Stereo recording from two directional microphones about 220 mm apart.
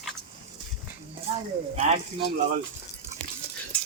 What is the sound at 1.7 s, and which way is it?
Speech, 30° right (ahead or behind).